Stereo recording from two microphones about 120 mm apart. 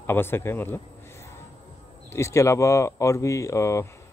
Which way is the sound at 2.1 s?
25° left (ahead or behind).